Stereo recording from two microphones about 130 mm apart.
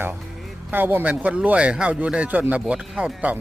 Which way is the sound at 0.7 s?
15° right (ahead or behind).